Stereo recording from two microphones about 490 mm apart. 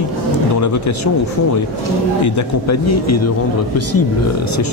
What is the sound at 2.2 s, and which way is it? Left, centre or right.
Speech, left.